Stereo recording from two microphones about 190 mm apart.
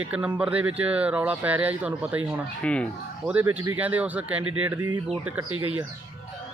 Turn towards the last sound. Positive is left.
turn(degrees=-90)